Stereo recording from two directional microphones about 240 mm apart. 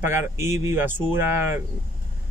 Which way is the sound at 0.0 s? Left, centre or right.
Centre.